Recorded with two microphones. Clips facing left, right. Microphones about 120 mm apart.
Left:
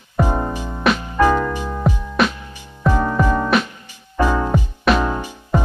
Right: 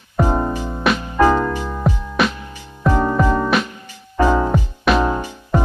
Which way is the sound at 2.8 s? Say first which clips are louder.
Right 1 dB; 15° right (ahead or behind).